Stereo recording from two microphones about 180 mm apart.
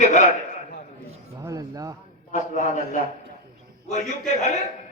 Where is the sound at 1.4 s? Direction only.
20° right (ahead or behind).